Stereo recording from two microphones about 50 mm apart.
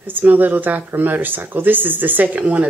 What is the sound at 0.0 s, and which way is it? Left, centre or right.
Speech, right.